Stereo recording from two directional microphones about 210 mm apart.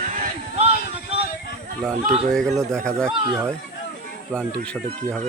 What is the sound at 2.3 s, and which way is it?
Speech, centre (ahead or behind).